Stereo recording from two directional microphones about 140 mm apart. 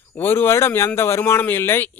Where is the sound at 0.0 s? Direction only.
15° left (ahead or behind).